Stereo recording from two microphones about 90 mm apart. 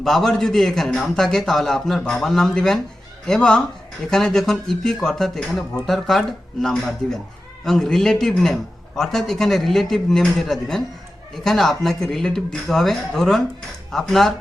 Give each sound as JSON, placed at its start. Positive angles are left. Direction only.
{"t": 0.0, "sound": "speech", "side_deg": 5}